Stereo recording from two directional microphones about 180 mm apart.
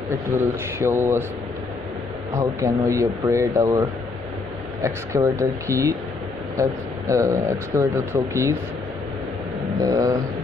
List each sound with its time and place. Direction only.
0.7 s speech: 15° right (ahead or behind)
2.3 s speech: 15° right (ahead or behind)
4.8 s speech: 15° right (ahead or behind)
9.8 s a sound: 20° right (ahead or behind)